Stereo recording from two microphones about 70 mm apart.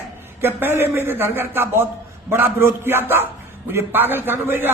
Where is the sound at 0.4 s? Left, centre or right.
Right.